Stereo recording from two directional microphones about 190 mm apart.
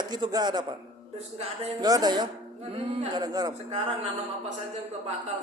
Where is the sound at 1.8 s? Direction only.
20° right (ahead or behind).